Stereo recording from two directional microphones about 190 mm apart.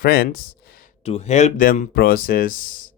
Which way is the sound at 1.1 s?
35° left (ahead or behind).